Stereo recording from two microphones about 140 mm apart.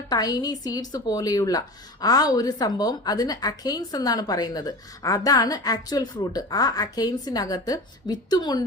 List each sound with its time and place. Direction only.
0.1 s a woman's voice: 30° left (ahead or behind)